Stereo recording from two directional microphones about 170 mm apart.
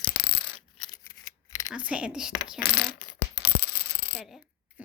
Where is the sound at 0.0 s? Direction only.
60° left (ahead or behind).